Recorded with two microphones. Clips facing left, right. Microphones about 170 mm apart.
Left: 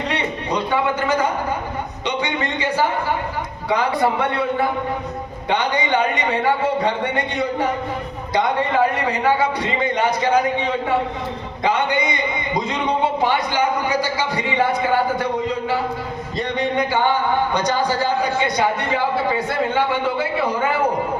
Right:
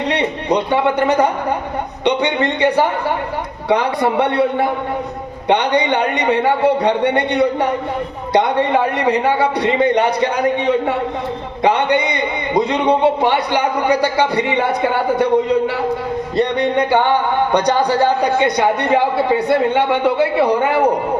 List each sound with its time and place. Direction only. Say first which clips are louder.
0.1 s a sound: right 8 dB; 65° right (ahead or behind)
2.0 s a man's voice: right 8 dB; 65° right (ahead or behind)
5.5 s a man's voice: right 5 dB; 70° right (ahead or behind)